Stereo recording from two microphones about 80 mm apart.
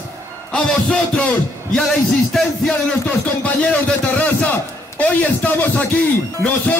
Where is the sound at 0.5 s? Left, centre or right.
Centre.